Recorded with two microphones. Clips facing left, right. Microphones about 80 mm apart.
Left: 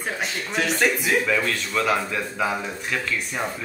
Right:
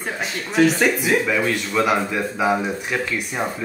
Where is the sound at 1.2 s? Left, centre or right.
Centre.